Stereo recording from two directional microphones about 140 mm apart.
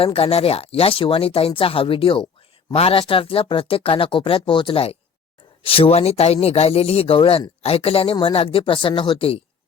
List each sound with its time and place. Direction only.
0.0 s speech: 45° left (ahead or behind)